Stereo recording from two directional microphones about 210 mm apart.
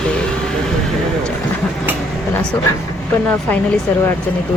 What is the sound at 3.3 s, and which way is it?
Speech, 5° left (ahead or behind).